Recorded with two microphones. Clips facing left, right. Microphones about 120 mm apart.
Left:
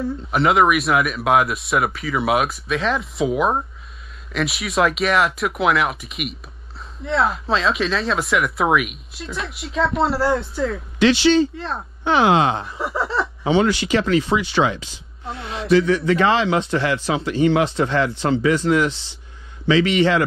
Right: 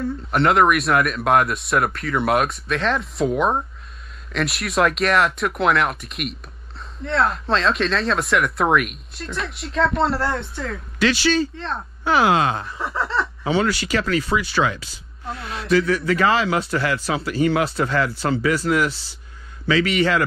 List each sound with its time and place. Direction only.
0.0 s speech: centre (ahead or behind)
11.0 s speech: 20° left (ahead or behind)
11.5 s speech: centre (ahead or behind)
12.0 s speech: 25° left (ahead or behind)
12.7 s speech: centre (ahead or behind)
13.4 s speech: 20° left (ahead or behind)